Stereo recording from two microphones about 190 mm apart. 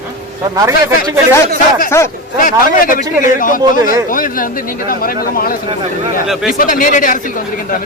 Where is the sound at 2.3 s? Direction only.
45° left (ahead or behind).